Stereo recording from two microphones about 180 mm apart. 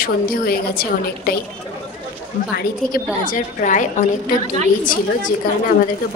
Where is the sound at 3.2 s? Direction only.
45° left (ahead or behind).